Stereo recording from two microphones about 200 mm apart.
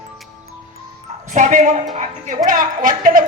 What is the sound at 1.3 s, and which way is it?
Speech, 40° right (ahead or behind).